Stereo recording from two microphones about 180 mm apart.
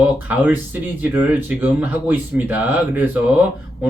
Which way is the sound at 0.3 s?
10° right (ahead or behind).